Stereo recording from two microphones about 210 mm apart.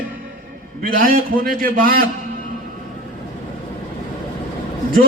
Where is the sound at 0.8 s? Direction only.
40° right (ahead or behind).